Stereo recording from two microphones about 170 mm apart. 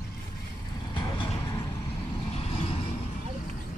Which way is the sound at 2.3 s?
35° left (ahead or behind).